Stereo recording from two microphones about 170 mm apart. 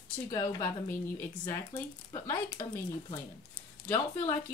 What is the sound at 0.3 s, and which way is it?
Speech, 20° left (ahead or behind).